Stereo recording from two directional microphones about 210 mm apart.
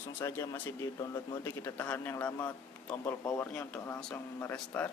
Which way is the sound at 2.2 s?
20° left (ahead or behind).